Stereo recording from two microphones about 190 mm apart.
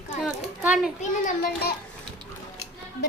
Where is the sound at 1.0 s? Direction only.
45° left (ahead or behind).